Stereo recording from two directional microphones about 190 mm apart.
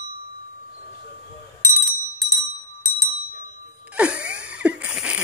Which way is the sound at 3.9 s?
5° right (ahead or behind).